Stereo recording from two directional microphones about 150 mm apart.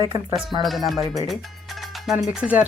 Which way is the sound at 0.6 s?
Centre (ahead or behind).